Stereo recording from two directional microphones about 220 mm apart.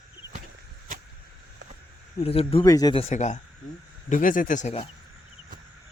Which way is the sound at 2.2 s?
25° left (ahead or behind).